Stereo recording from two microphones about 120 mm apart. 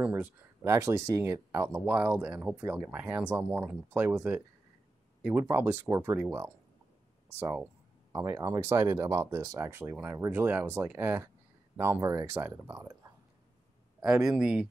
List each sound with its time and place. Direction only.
0.0 s speech: 10° right (ahead or behind)
1.9 s speech: 10° right (ahead or behind)
12.0 s speech: 25° right (ahead or behind)
14.0 s speech: 5° right (ahead or behind)